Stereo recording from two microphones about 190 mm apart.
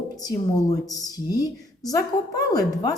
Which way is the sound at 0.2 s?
20° left (ahead or behind).